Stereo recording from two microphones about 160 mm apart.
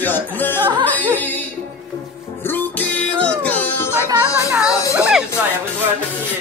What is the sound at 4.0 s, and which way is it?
Music, 20° right (ahead or behind).